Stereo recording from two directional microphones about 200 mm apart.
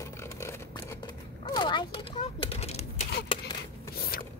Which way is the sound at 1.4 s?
25° left (ahead or behind).